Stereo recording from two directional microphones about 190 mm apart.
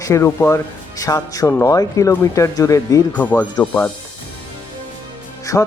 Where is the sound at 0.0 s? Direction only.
15° left (ahead or behind).